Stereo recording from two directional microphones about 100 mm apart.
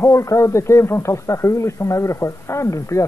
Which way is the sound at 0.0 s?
30° left (ahead or behind).